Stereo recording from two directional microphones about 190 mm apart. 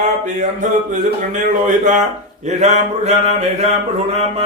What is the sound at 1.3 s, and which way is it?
A man's voice, 40° right (ahead or behind).